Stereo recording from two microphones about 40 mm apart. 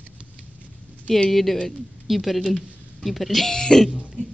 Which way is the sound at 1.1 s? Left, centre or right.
Centre.